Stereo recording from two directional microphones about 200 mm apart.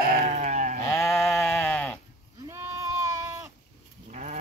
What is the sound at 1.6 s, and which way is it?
Sheep, 10° left (ahead or behind).